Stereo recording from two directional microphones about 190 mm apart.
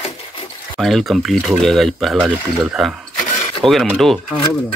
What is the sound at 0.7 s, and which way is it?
Speech, centre (ahead or behind).